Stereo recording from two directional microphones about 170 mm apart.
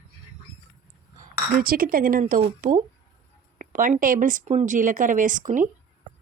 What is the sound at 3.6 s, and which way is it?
Speech, 50° right (ahead or behind).